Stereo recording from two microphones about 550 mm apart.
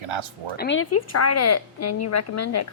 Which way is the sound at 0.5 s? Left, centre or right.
Centre.